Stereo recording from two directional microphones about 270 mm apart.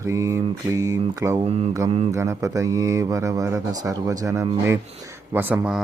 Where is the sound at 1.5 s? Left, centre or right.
Right.